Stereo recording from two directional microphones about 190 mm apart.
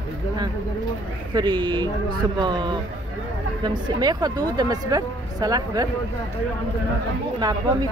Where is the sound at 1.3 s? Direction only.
25° right (ahead or behind).